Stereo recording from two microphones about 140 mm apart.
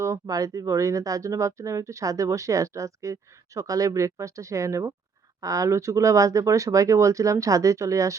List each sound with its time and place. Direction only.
0.0 s speech: 25° right (ahead or behind)